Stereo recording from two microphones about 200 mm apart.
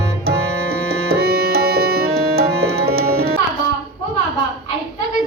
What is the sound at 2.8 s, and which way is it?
Music, 50° right (ahead or behind).